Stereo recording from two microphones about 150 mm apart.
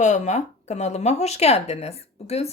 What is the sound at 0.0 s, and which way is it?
A woman's voice, 50° left (ahead or behind).